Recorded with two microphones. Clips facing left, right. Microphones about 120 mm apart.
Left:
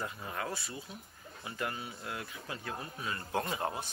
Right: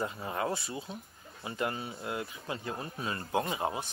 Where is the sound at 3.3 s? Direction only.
15° right (ahead or behind).